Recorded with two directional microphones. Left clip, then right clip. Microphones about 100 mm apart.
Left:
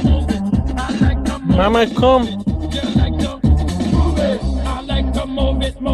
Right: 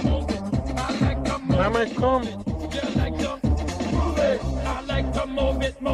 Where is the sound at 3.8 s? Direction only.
55° right (ahead or behind).